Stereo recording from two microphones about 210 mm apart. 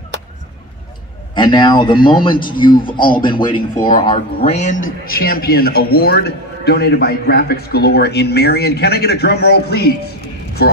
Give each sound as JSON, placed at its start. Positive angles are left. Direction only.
{"t": 1.3, "sound": "a man's voice", "side_deg": 20}
{"t": 4.5, "sound": "speech", "side_deg": 35}
{"t": 5.2, "sound": "a man's voice", "side_deg": 45}